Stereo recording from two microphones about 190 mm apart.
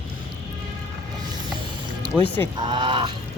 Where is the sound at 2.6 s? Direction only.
25° right (ahead or behind).